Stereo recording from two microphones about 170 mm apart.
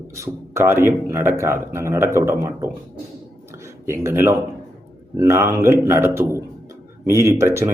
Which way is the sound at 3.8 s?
15° right (ahead or behind).